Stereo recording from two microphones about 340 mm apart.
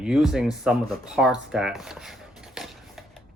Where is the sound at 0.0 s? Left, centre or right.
Centre.